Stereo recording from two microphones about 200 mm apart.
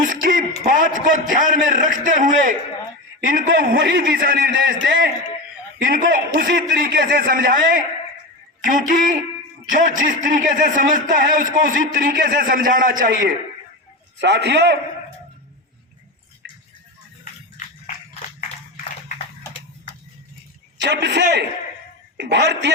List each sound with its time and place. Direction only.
0.0 s a man's voice: 45° right (ahead or behind)
14.2 s a man's voice: 60° right (ahead or behind)
16.4 s a sound: 55° right (ahead or behind)
20.7 s a man's voice: 60° right (ahead or behind)